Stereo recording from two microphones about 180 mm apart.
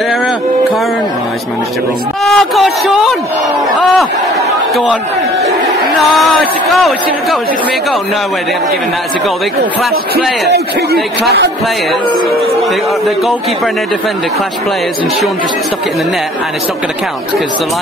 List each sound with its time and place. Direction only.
2.2 s a man's voice: centre (ahead or behind)
6.7 s a man's voice: centre (ahead or behind)
10.4 s speech: 65° right (ahead or behind)